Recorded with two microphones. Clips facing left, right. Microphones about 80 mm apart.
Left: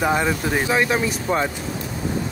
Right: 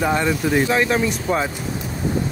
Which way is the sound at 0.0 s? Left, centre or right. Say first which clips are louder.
Right 1 dB; centre.